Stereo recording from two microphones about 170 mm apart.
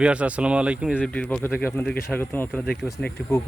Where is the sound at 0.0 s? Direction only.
5° right (ahead or behind).